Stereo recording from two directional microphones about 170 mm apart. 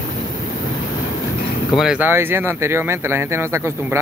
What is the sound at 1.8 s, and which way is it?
Speech, 5° right (ahead or behind).